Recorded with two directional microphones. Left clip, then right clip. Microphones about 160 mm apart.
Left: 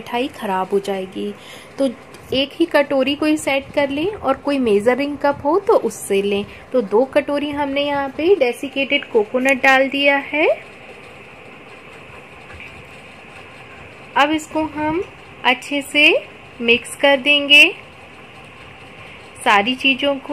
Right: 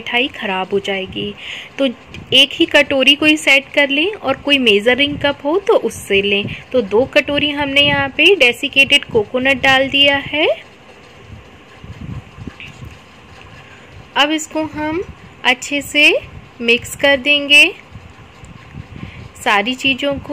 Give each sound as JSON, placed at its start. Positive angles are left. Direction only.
{"t": 0.1, "sound": "speech", "side_deg": 10}
{"t": 2.2, "sound": "speech", "side_deg": 0}
{"t": 5.2, "sound": "a woman's voice", "side_deg": -15}
{"t": 5.7, "sound": "speech", "side_deg": 0}
{"t": 14.1, "sound": "speech", "side_deg": 0}
{"t": 19.4, "sound": "speech", "side_deg": 0}